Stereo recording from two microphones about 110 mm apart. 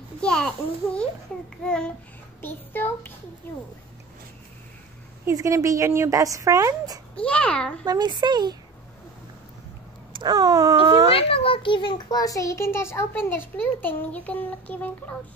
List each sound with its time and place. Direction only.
0.2 s a child's voice: 10° left (ahead or behind)
2.4 s a child's voice: 20° left (ahead or behind)
5.2 s speech: 30° right (ahead or behind)
7.2 s a child's voice: 10° left (ahead or behind)
7.8 s speech: 40° right (ahead or behind)
10.1 s speech: 40° right (ahead or behind)
11.1 s a child's voice: 55° left (ahead or behind); by 15.1 s 15° left (ahead or behind)